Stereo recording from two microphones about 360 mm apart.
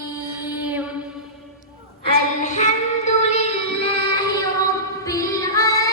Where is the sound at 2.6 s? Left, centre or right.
Centre.